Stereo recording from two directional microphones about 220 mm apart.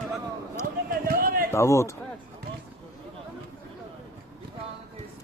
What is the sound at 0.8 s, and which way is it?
Basketball bounce, 40° right (ahead or behind).